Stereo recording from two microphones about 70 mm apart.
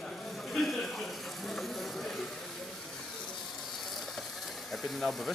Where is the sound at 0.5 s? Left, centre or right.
Centre.